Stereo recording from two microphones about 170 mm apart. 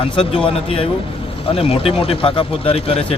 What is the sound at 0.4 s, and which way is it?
Speech, 35° left (ahead or behind).